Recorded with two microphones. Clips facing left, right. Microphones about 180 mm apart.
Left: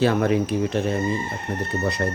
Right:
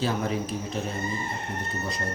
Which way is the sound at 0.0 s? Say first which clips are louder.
Left 8 dB; 65° left (ahead or behind).